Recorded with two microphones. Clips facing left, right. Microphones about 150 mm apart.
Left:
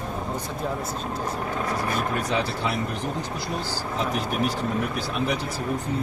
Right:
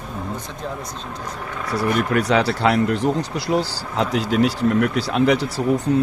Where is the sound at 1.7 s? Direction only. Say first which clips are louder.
Right 10 dB; 80° right.